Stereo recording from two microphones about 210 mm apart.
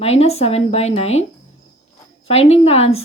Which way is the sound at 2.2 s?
30° left (ahead or behind).